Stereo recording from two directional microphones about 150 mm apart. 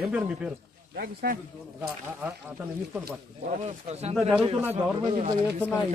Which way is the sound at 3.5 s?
50° right (ahead or behind).